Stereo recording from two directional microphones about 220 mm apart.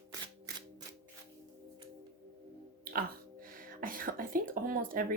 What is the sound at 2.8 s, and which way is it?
Speech, 40° right (ahead or behind).